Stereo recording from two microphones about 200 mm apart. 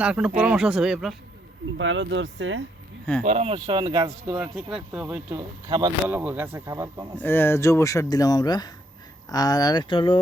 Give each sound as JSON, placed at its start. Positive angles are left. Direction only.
{"t": 0.0, "sound": "speech", "side_deg": -5}
{"t": 1.8, "sound": "speech", "side_deg": -70}
{"t": 3.2, "sound": "speech", "side_deg": -30}
{"t": 4.4, "sound": "speech", "side_deg": -5}
{"t": 5.6, "sound": "speech", "side_deg": -20}
{"t": 6.1, "sound": "speech", "side_deg": -10}
{"t": 7.2, "sound": "speech", "side_deg": 10}